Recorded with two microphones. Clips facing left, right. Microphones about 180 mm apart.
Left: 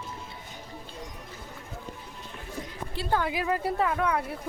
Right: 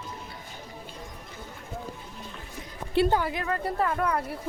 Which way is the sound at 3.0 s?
65° right (ahead or behind).